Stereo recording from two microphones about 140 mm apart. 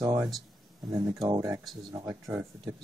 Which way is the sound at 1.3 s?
20° right (ahead or behind).